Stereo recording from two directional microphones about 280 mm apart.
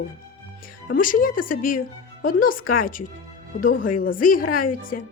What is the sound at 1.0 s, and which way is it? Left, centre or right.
Speech, left.